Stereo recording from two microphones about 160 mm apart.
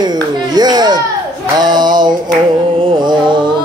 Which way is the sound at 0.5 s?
25° right (ahead or behind).